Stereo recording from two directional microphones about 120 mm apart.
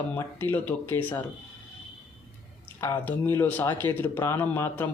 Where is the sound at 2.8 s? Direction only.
20° left (ahead or behind).